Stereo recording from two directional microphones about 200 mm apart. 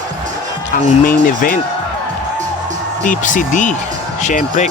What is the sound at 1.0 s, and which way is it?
Speech, 45° left (ahead or behind).